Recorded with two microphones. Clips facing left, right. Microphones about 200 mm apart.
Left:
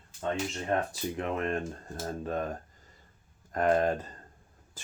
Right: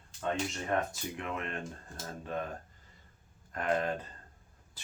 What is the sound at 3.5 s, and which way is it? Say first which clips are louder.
Speech: left 6 dB; 40° left (ahead or behind).